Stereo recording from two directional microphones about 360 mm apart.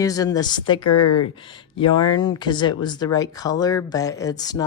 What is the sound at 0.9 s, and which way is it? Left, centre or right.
Speech, left.